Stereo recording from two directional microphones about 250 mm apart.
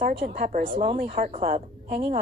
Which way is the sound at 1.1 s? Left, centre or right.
Right.